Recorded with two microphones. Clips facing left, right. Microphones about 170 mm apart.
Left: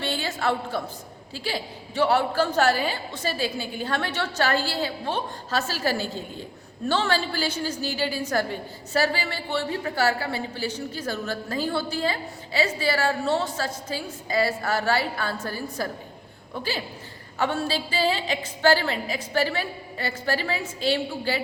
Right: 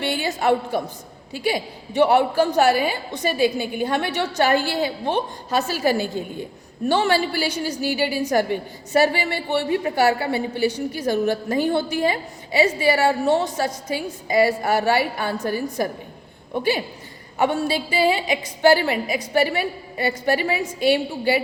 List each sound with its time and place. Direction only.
0.0 s a woman's voice: 15° right (ahead or behind)